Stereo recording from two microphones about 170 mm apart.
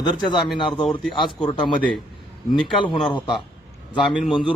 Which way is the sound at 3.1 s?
30° left (ahead or behind).